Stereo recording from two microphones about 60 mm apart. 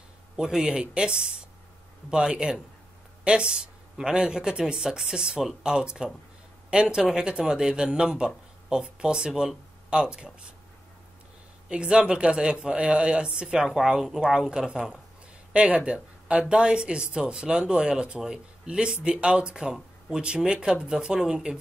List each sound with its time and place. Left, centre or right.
0.4 s speech: centre
11.7 s speech: centre